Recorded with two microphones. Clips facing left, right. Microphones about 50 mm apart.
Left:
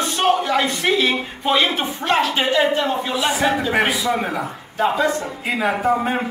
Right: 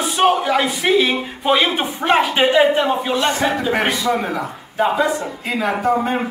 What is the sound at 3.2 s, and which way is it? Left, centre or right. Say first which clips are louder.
Speech: left 2 dB; centre.